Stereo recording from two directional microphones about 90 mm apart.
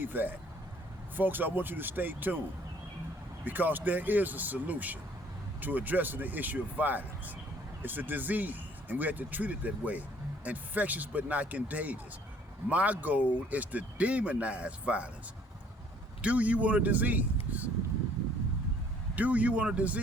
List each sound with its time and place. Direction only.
0.0 s speech: 20° right (ahead or behind)
3.4 s speech: 20° right (ahead or behind)
16.2 s speech: 15° right (ahead or behind)
19.1 s speech: 15° right (ahead or behind)